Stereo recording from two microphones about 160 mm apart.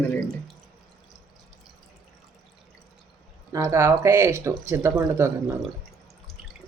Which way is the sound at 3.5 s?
20° right (ahead or behind).